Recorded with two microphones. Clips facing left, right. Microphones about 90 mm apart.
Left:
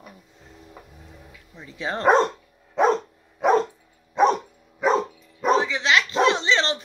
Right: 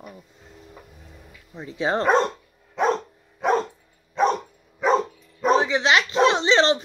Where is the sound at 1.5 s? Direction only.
30° right (ahead or behind).